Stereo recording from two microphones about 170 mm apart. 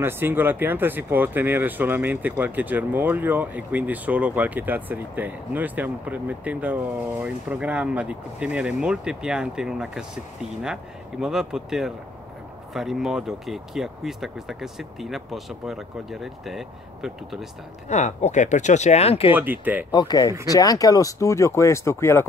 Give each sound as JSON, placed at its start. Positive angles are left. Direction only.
{"t": 0.0, "sound": "speech", "side_deg": -10}
{"t": 17.8, "sound": "speech", "side_deg": 40}
{"t": 19.3, "sound": "speech", "side_deg": -10}
{"t": 19.9, "sound": "speech", "side_deg": 25}